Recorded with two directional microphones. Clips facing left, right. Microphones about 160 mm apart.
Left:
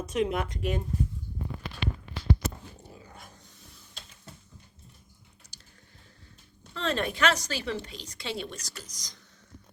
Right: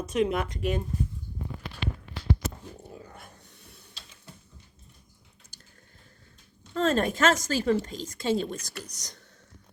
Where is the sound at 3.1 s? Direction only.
60° right (ahead or behind).